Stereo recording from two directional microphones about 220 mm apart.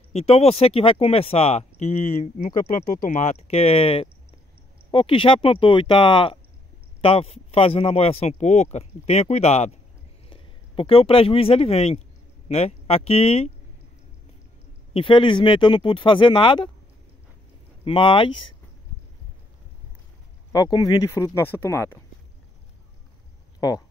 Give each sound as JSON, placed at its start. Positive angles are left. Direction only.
{"t": 0.1, "sound": "speech", "side_deg": 30}
{"t": 15.0, "sound": "speech", "side_deg": 25}
{"t": 17.8, "sound": "speech", "side_deg": 25}
{"t": 20.5, "sound": "speech", "side_deg": 15}
{"t": 23.6, "sound": "speech", "side_deg": 15}